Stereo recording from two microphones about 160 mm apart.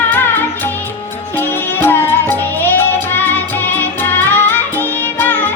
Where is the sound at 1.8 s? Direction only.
15° left (ahead or behind).